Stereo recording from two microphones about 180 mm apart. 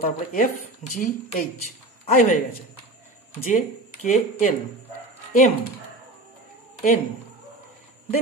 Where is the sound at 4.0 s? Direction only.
45° left (ahead or behind).